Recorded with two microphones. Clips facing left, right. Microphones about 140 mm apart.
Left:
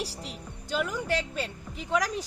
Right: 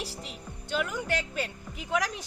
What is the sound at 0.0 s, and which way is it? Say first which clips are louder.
Music: left 2 dB; 35° left (ahead or behind).